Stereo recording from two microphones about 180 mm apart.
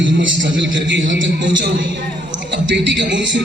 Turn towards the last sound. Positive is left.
turn(degrees=-80)